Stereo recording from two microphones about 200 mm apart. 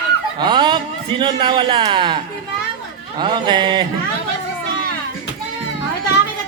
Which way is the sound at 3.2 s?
25° right (ahead or behind).